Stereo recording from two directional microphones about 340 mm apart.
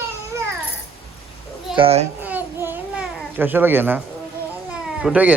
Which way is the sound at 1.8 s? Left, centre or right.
Centre.